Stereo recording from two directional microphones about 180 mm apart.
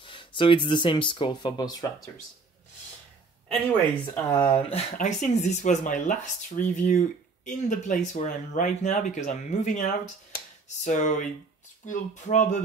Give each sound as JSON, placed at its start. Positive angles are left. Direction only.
{"t": 0.0, "sound": "speech", "side_deg": 30}
{"t": 4.0, "sound": "speech", "side_deg": 10}
{"t": 4.5, "sound": "speech", "side_deg": 30}
{"t": 4.9, "sound": "speech", "side_deg": 40}